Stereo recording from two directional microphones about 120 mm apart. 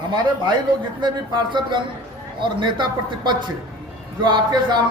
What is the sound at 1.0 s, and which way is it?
Speech, 40° right (ahead or behind).